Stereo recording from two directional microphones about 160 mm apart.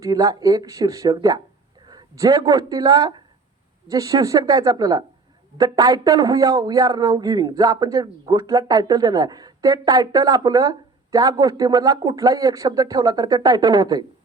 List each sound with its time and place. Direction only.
0.0 s speech: 20° right (ahead or behind)